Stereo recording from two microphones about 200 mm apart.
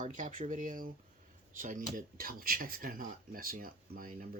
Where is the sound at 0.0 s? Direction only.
40° right (ahead or behind).